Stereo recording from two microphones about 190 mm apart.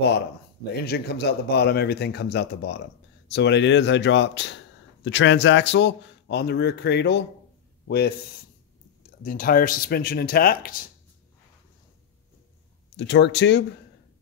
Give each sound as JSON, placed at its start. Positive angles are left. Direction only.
{"t": 0.7, "sound": "a man's voice", "side_deg": 55}
{"t": 9.2, "sound": "speech", "side_deg": 50}
{"t": 12.9, "sound": "speech", "side_deg": 65}